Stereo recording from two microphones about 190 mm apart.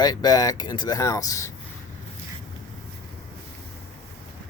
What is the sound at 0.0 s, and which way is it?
Speech, 20° left (ahead or behind).